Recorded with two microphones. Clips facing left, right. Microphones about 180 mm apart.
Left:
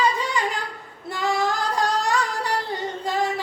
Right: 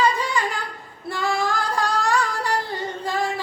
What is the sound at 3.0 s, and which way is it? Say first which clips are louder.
Singing: left 1 dB; 20° left (ahead or behind).